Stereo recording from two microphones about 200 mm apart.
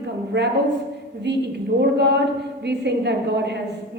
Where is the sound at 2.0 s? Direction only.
55° right (ahead or behind).